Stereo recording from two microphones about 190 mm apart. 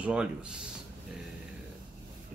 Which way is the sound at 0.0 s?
5° right (ahead or behind).